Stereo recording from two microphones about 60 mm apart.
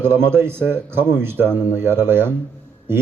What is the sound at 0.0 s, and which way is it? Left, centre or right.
Speech, right.